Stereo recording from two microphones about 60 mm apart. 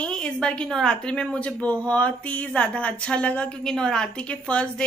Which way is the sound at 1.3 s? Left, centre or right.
Left.